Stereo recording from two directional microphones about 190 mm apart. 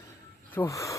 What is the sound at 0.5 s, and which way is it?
Speech, 15° left (ahead or behind).